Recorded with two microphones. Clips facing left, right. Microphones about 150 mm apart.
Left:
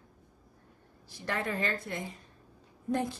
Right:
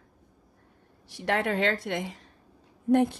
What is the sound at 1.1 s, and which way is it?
A woman's voice, 75° right (ahead or behind).